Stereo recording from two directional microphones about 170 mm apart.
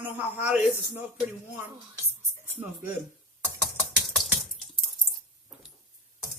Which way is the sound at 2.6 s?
10° right (ahead or behind).